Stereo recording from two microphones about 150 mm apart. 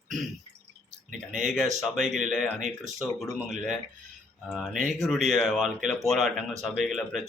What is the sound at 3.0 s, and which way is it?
Speech, 5° right (ahead or behind).